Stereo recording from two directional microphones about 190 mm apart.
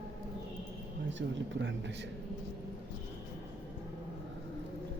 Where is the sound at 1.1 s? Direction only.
70° right (ahead or behind).